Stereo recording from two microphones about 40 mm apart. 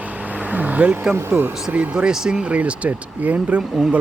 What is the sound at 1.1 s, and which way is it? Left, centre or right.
Speech, right.